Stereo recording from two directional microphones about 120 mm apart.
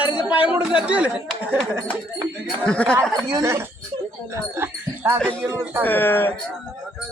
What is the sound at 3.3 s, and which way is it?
Speech, 25° right (ahead or behind).